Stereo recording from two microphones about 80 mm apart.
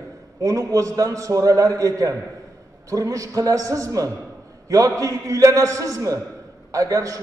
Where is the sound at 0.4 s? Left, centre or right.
Right.